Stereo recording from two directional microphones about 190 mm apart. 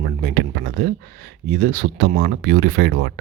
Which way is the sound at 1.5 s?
50° right (ahead or behind).